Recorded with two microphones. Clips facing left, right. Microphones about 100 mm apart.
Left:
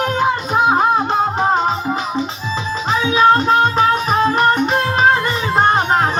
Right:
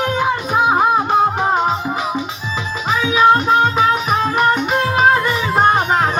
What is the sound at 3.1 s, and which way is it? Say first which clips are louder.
Music: even; 10° right (ahead or behind).